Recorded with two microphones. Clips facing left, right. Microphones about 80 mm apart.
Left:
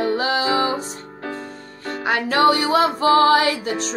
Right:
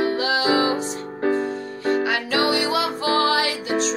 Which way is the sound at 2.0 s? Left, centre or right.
Left.